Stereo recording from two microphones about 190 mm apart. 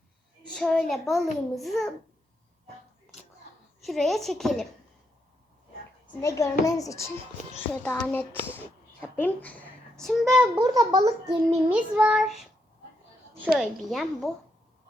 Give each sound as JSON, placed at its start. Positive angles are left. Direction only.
{"t": 0.5, "sound": "a child's voice", "side_deg": 5}
{"t": 3.8, "sound": "a child's voice", "side_deg": 0}
{"t": 6.2, "sound": "a woman's voice", "side_deg": 15}
{"t": 10.5, "sound": "a child's voice", "side_deg": -20}
{"t": 11.7, "sound": "a child's voice", "side_deg": -5}
{"t": 13.6, "sound": "a child's voice", "side_deg": 0}